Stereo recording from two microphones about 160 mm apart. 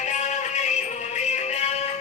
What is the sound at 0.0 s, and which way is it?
Music, 50° left (ahead or behind).